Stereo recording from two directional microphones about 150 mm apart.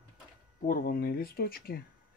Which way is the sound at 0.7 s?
80° left.